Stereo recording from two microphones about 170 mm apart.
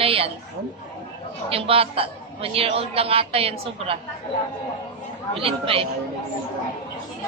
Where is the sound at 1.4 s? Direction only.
35° right (ahead or behind).